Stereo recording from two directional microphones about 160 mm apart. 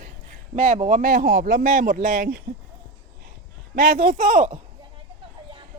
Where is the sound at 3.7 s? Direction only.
65° right (ahead or behind); by 4.5 s 50° right (ahead or behind).